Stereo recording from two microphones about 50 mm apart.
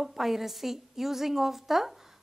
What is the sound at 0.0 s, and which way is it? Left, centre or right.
A woman's voice, centre.